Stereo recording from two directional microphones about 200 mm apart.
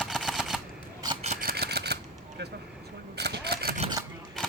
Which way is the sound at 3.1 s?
55° right (ahead or behind).